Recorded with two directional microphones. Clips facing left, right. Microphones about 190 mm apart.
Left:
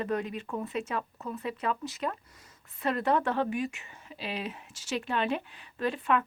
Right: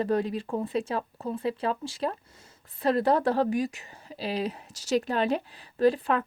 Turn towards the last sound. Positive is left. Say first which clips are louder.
# right 5 dB
turn(degrees=-35)  # may be behind; listen again after turning